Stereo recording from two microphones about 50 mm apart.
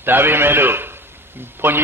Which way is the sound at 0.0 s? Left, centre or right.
Right.